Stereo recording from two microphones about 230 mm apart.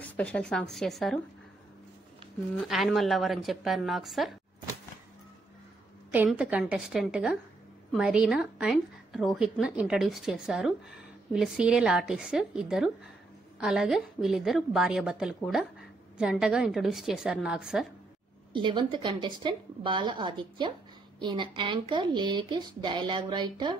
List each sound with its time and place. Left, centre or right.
0.0 s a woman's voice: centre
2.6 s a woman's voice: centre
6.1 s a woman's voice: centre
18.5 s speech: right